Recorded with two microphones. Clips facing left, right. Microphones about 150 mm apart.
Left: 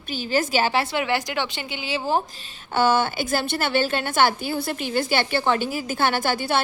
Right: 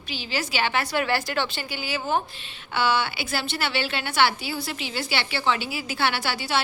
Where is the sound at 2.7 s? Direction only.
45° left (ahead or behind).